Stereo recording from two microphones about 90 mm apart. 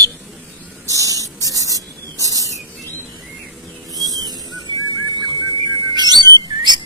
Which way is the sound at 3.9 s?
45° right (ahead or behind).